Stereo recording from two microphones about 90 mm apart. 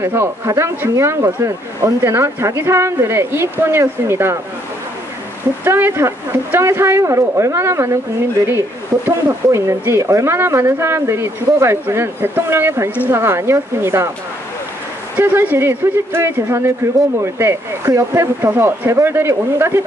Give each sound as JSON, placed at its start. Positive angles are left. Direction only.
{"t": 0.0, "sound": "speech", "side_deg": -30}
{"t": 5.6, "sound": "speech", "side_deg": -25}
{"t": 15.1, "sound": "speech", "side_deg": -20}